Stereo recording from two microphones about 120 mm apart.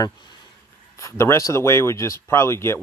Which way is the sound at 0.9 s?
25° left (ahead or behind).